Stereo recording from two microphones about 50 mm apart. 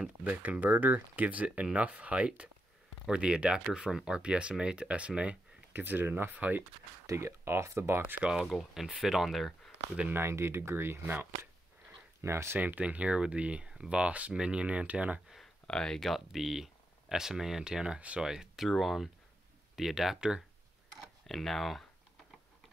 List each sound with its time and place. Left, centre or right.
0.2 s speech: right
5.7 s speech: right
6.3 s speech: right
7.1 s speech: right
8.7 s speech: centre
10.0 s speech: right
12.2 s speech: right
12.5 s speech: right
15.6 s speech: centre
16.3 s speech: centre; by 18.2 s right
18.2 s speech: centre
21.3 s speech: centre